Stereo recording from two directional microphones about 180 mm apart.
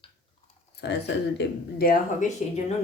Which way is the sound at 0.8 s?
70° left (ahead or behind).